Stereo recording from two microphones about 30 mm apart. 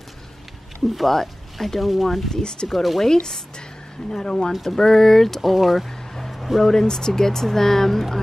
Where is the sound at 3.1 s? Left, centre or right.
Centre.